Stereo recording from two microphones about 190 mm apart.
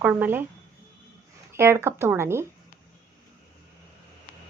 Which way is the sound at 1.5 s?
15° right (ahead or behind).